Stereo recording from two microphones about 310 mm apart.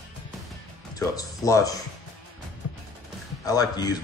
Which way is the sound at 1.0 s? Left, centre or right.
Centre.